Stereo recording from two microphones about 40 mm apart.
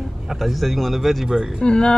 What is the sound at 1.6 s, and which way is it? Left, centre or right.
Speech, left.